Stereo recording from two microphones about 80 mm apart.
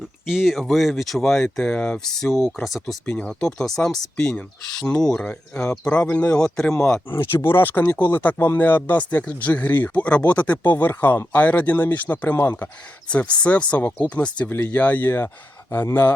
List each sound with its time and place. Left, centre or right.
0.3 s speech: centre
7.1 s speech: left
13.1 s speech: centre